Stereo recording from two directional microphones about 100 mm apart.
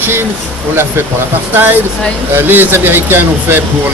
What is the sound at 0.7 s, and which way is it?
Speech, 25° right (ahead or behind).